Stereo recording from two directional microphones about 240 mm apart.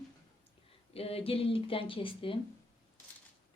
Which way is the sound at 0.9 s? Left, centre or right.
Left.